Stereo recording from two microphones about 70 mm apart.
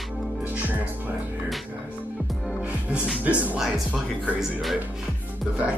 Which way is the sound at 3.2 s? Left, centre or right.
Right.